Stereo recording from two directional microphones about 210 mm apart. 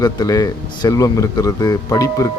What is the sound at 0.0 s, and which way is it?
Speech, 15° left (ahead or behind).